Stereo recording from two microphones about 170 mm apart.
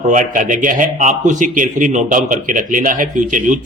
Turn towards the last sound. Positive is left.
turn(degrees=-50)  # may be behind; listen again after turning